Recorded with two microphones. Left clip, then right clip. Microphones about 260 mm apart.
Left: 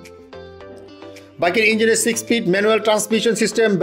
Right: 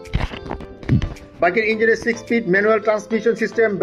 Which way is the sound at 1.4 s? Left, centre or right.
Left.